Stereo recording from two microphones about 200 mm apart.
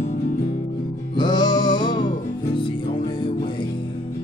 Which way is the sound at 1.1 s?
20° left (ahead or behind).